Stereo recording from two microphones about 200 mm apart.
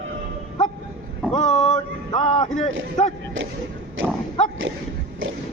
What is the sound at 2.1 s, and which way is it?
Speech, 25° left (ahead or behind).